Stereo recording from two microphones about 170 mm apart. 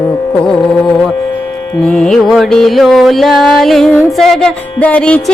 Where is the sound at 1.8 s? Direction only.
5° left (ahead or behind).